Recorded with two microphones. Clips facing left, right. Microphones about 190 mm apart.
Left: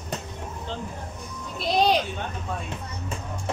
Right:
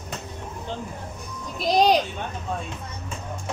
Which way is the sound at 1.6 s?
40° right (ahead or behind).